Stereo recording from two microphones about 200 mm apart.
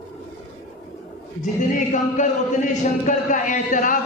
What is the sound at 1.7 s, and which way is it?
A man's voice, 40° left (ahead or behind).